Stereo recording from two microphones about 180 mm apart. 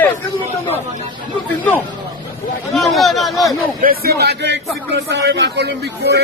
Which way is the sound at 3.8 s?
55° right (ahead or behind).